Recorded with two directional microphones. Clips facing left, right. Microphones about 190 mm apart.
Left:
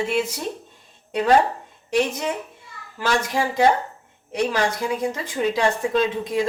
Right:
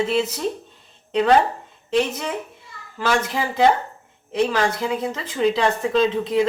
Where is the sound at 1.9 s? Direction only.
15° left (ahead or behind).